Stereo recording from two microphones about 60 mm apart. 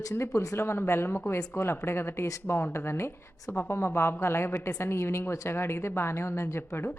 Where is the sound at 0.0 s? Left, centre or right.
Left.